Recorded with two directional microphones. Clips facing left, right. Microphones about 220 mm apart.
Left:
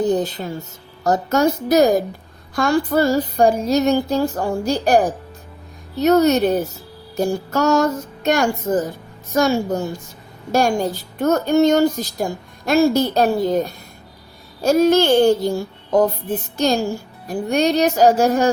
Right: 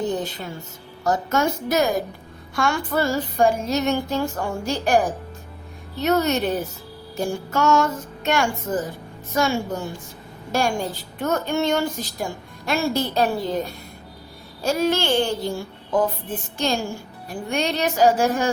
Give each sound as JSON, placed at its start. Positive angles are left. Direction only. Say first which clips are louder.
{"t": 1.0, "sound": "a woman's voice", "louder": "left 5 dB", "side_deg": 40}
{"t": 14.6, "sound": "a woman's voice", "louder": "left 7 dB", "side_deg": 40}